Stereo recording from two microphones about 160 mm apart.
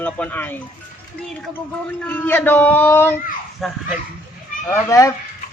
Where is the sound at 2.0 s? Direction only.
10° left (ahead or behind).